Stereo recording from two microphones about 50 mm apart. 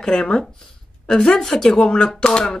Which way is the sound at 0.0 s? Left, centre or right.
Centre.